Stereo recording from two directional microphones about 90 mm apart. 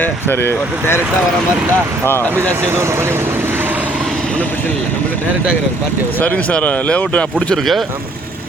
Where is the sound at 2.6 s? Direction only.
30° right (ahead or behind).